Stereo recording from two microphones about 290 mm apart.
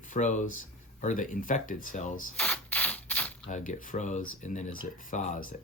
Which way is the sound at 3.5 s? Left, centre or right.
Left.